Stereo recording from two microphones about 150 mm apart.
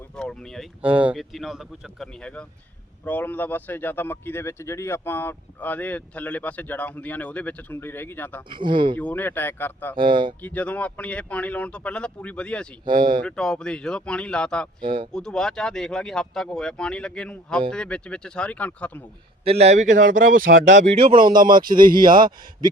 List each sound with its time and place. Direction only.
0.2 s a sound: 5° left (ahead or behind)
0.8 s a man's voice: 10° right (ahead or behind); by 8.4 s 10° left (ahead or behind)
8.4 s speech: 35° right (ahead or behind)
9.0 s a man's voice: 10° left (ahead or behind)
9.9 s speech: 30° right (ahead or behind)
10.4 s a man's voice: 10° left (ahead or behind)
12.8 s speech: 30° right (ahead or behind)
13.2 s a man's voice: 5° left (ahead or behind)
14.8 s speech: 35° right (ahead or behind)
15.1 s a man's voice: 5° left (ahead or behind)
19.5 s speech: 45° right (ahead or behind)
21.8 s speech: 70° right (ahead or behind)